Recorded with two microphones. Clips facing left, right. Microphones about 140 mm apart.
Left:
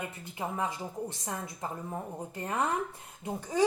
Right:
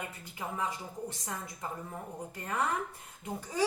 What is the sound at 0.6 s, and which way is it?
Speech, 20° left (ahead or behind).